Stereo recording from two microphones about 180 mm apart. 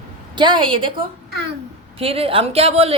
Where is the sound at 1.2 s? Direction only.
65° right (ahead or behind).